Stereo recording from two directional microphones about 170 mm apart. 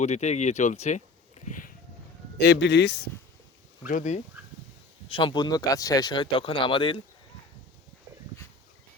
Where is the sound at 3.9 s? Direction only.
45° left (ahead or behind).